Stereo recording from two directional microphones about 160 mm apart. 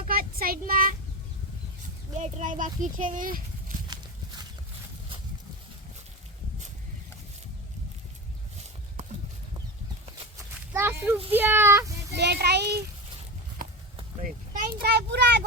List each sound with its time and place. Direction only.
0.1 s child singing: 65° right (ahead or behind)
2.1 s speech: 50° right (ahead or behind)
10.7 s a sound: 10° right (ahead or behind)
11.3 s speech: 15° right (ahead or behind)
12.1 s a child's voice: 90° right
13.6 s a sound: 60° right (ahead or behind)
14.2 s vehicle: 60° right (ahead or behind); by 15.4 s 90° right